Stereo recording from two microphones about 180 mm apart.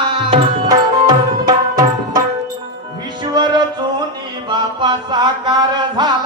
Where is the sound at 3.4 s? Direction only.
25° right (ahead or behind).